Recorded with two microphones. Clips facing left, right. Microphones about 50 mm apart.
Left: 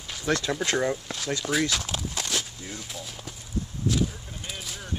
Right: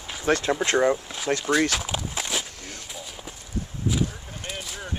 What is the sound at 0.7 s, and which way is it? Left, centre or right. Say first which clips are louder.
Speech: right 6 dB; right.